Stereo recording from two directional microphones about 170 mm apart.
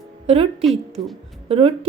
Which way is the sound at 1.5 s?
35° right (ahead or behind).